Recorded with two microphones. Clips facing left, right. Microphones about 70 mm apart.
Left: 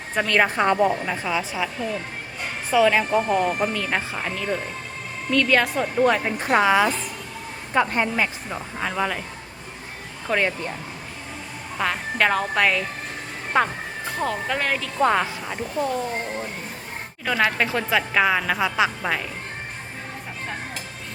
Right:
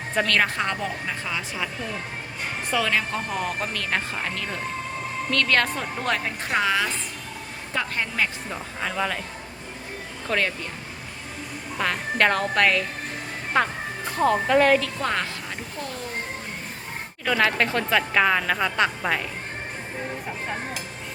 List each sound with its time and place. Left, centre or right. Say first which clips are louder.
0.3 s speech: left 8 dB; centre
2.7 s speech: left 7 dB; centre
10.2 s speech: left 2 dB; centre
11.8 s a woman's voice: even; centre
14.9 s speech: left 6 dB; centre
17.2 s a woman's voice: even; centre